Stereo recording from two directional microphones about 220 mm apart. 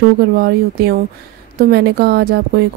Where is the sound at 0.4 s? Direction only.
45° right (ahead or behind).